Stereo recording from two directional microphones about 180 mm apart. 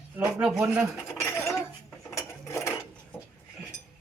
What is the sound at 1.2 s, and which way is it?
Cutlery, 15° left (ahead or behind).